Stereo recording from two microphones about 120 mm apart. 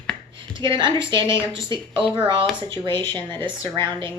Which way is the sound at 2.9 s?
15° left (ahead or behind).